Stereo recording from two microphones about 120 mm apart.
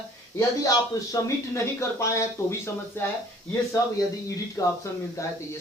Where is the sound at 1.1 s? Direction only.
25° left (ahead or behind).